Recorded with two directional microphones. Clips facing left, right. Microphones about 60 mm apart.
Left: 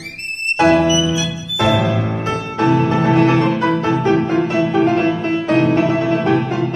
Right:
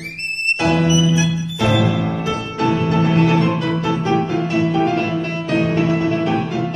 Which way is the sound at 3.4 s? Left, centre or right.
Left.